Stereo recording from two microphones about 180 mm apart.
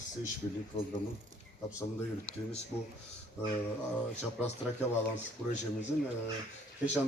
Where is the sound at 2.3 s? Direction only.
5° left (ahead or behind).